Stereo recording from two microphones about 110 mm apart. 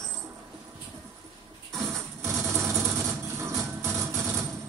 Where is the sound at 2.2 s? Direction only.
25° right (ahead or behind).